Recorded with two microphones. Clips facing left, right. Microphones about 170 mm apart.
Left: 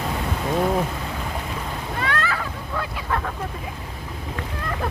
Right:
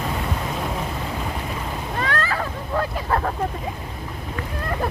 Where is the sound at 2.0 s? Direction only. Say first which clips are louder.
Right 1 dB; 40° right (ahead or behind).